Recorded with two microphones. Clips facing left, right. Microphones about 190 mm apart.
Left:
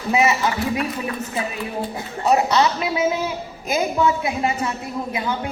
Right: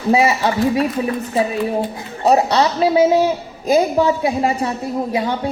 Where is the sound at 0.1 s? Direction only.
30° right (ahead or behind).